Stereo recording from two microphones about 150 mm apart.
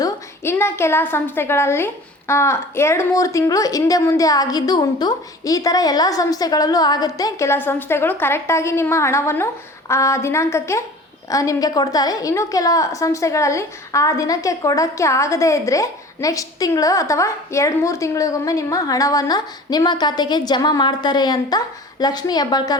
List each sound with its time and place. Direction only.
0.0 s a woman's voice: 15° left (ahead or behind)